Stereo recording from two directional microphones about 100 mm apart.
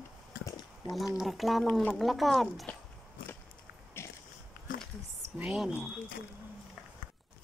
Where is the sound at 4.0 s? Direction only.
25° left (ahead or behind).